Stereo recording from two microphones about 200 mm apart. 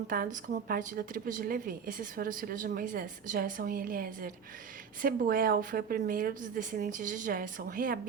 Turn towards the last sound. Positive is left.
turn(degrees=-45)  # may be behind; listen again after turning